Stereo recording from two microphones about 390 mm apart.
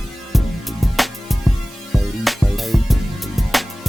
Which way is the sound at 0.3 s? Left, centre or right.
Centre.